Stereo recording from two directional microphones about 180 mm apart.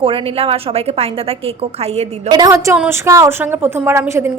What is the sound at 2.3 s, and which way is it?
A woman's voice, 20° right (ahead or behind).